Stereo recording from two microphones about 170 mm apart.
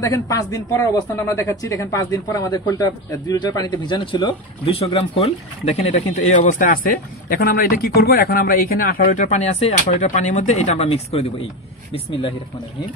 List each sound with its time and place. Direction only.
0.0 s speech: 20° left (ahead or behind); by 5.3 s 35° left (ahead or behind)
6.4 s a man's voice: 50° left (ahead or behind); by 12.4 s 30° left (ahead or behind)